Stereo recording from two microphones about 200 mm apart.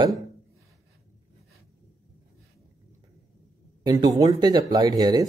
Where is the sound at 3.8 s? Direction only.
20° right (ahead or behind).